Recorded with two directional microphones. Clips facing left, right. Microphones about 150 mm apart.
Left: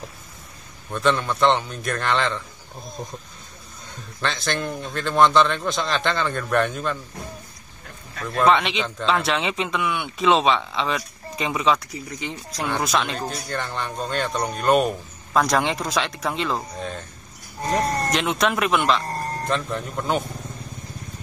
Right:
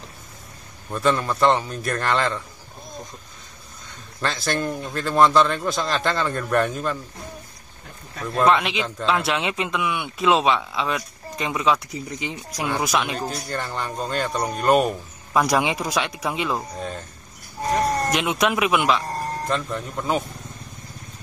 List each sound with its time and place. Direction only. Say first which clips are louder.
0.9 s speech: even; centre (ahead or behind)
4.2 s speech: right 1 dB; 5° right (ahead or behind)
8.2 s speech: even; centre (ahead or behind)
11.9 s speech: right 1 dB; 20° right (ahead or behind)
12.6 s speech: even; 5° right (ahead or behind)